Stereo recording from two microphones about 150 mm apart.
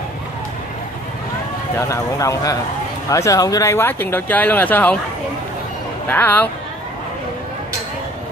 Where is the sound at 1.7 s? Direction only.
20° left (ahead or behind).